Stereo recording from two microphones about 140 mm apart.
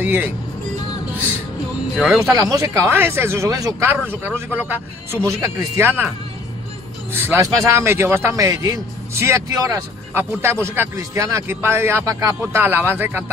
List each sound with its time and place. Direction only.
0.0 s speech: 15° right (ahead or behind)
2.0 s speech: centre (ahead or behind)
2.3 s a man's voice: 25° right (ahead or behind)
4.1 s speech: 15° right (ahead or behind)
7.1 s a man's voice: 15° right (ahead or behind)